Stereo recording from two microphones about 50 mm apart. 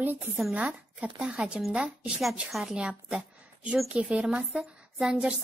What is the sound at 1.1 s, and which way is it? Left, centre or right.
Speech, centre.